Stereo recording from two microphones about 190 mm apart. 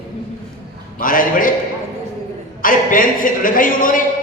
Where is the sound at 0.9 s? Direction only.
45° left (ahead or behind).